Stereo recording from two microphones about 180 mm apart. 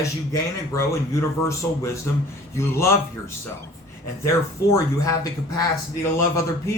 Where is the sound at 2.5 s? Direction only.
15° left (ahead or behind).